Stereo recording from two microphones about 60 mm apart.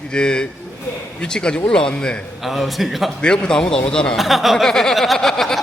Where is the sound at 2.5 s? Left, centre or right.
Centre.